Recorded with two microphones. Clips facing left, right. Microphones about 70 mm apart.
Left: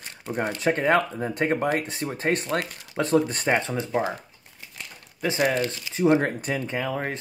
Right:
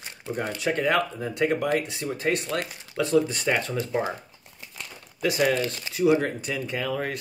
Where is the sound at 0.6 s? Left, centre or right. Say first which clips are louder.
Left 2 dB; left.